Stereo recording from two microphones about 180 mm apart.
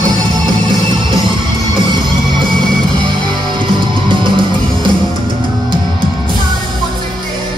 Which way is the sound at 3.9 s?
25° right (ahead or behind).